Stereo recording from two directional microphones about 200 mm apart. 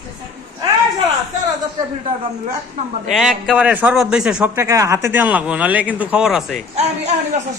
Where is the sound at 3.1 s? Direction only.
Centre (ahead or behind).